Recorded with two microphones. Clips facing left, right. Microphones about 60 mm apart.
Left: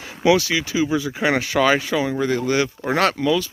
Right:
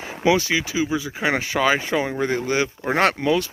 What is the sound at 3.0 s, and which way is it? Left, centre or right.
Speech, right.